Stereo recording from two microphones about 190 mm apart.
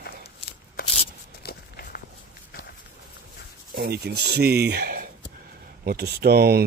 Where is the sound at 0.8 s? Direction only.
50° left (ahead or behind).